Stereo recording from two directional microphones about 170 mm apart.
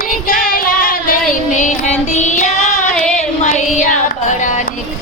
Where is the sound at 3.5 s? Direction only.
45° left (ahead or behind).